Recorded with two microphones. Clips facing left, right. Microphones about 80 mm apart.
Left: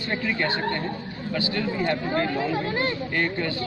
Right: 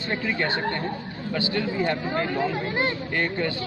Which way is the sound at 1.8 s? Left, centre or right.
Centre.